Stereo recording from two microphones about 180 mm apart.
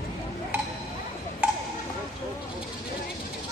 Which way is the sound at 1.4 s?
10° right (ahead or behind).